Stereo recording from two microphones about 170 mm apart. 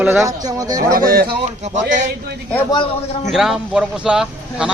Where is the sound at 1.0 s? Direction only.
60° right (ahead or behind).